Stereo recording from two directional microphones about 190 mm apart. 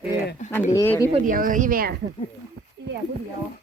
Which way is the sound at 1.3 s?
45° right (ahead or behind).